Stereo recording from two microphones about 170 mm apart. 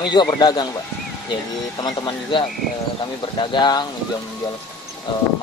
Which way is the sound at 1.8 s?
25° left (ahead or behind).